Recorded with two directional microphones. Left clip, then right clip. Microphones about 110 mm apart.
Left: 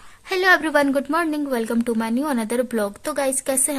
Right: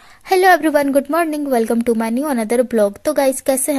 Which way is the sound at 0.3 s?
40° right (ahead or behind).